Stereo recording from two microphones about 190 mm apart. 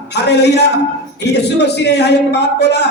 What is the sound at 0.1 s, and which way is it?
Music, 60° left (ahead or behind).